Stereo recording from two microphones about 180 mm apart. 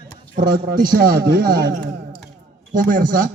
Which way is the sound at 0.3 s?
50° right (ahead or behind).